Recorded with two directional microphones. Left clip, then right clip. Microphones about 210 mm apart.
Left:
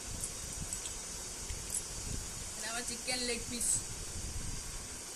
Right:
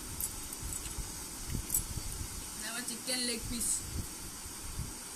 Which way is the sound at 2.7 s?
Centre (ahead or behind).